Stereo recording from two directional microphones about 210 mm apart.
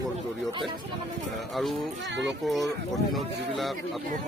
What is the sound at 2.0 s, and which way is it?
Speech, 60° right (ahead or behind).